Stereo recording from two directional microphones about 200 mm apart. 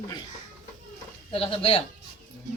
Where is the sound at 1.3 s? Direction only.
25° left (ahead or behind).